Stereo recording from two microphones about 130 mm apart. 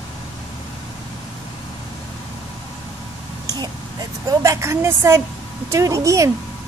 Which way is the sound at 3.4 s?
30° right (ahead or behind).